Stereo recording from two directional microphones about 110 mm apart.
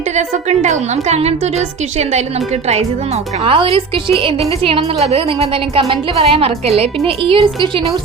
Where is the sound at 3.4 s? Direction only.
55° right (ahead or behind).